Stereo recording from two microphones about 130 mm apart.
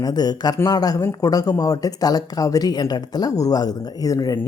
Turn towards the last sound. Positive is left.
turn(degrees=25)  # may be behind; listen again after turning